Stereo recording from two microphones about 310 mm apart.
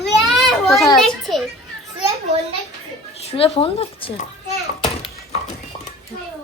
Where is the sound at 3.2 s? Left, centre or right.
Centre.